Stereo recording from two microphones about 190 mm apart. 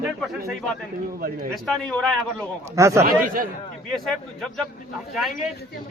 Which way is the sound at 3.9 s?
Centre (ahead or behind).